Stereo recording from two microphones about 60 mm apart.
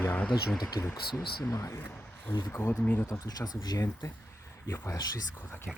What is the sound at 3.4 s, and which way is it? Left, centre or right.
Speech, left.